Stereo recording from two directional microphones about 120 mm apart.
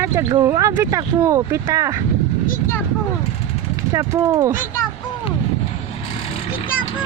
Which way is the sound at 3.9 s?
30° right (ahead or behind).